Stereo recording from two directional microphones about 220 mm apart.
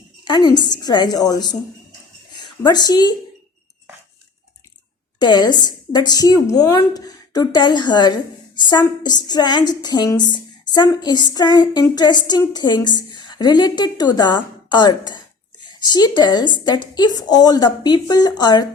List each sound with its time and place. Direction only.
0.3 s speech: 20° left (ahead or behind)
2.6 s speech: 20° left (ahead or behind)
5.2 s speech: 20° left (ahead or behind)